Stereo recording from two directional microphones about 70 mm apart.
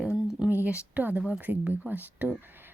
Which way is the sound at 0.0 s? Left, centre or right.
Centre.